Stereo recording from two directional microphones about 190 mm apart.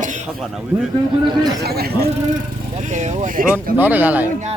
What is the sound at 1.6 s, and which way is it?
Speech, 55° right (ahead or behind).